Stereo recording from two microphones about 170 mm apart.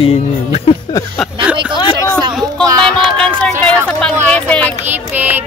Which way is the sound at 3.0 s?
5° left (ahead or behind).